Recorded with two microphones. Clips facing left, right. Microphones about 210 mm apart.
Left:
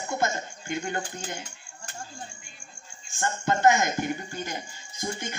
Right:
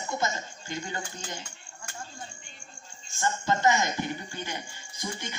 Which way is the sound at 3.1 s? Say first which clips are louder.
Left 1 dB; 55° left (ahead or behind).